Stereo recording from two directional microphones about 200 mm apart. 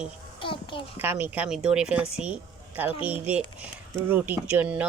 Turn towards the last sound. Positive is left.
turn(degrees=-5)  # may be behind; listen again after turning